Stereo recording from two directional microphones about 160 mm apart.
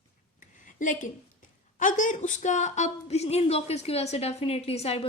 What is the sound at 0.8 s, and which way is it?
A woman's voice, 55° left (ahead or behind).